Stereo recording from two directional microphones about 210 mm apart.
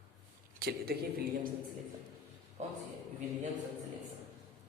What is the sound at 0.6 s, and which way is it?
Speech, 50° right (ahead or behind).